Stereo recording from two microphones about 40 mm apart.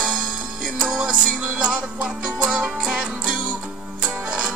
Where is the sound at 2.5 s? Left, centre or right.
Right.